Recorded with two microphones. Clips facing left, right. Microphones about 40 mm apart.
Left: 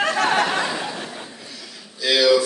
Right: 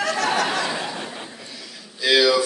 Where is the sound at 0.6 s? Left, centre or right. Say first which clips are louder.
Even; centre.